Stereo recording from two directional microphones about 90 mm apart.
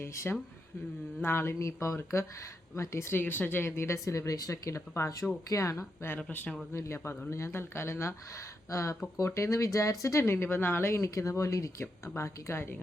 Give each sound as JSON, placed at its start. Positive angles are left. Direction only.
{"t": 0.0, "sound": "speech", "side_deg": 30}
{"t": 6.1, "sound": "speech", "side_deg": 15}
{"t": 6.7, "sound": "speech", "side_deg": 30}